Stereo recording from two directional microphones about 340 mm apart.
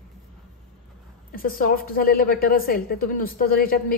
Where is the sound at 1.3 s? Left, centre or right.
Left.